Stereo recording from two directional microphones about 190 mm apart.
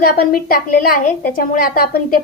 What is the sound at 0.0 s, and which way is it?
A woman's voice, 50° left (ahead or behind).